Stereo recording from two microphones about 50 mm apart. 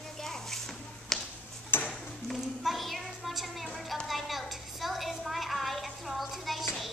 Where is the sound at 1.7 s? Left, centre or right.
Left.